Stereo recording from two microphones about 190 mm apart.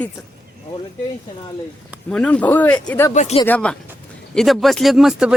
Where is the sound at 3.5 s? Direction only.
5° left (ahead or behind).